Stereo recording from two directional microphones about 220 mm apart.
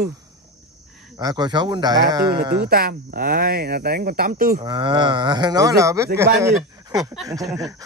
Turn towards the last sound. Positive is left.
turn(degrees=-15)  # may be behind; listen again after turning